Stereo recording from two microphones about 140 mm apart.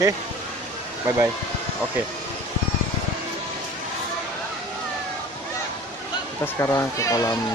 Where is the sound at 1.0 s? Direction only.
20° right (ahead or behind).